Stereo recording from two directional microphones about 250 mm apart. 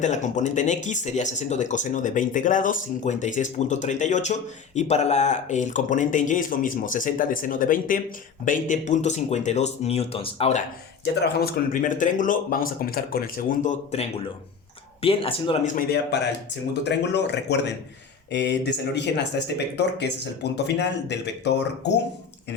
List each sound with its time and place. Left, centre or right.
0.0 s speech: left
11.0 s a man's voice: left
16.8 s speech: left